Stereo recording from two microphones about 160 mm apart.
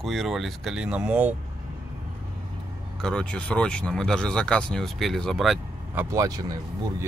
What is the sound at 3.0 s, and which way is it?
Speech, 5° left (ahead or behind).